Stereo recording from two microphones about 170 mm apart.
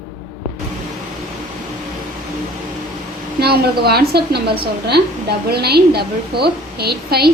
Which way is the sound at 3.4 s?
70° right (ahead or behind).